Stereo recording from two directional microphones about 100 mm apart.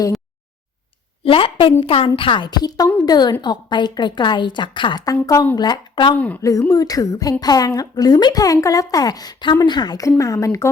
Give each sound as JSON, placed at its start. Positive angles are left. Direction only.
{"t": 1.2, "sound": "a woman's voice", "side_deg": 65}
{"t": 5.2, "sound": "a woman's voice", "side_deg": 35}
{"t": 6.1, "sound": "a woman's voice", "side_deg": 15}
{"t": 6.4, "sound": "a woman's voice", "side_deg": 30}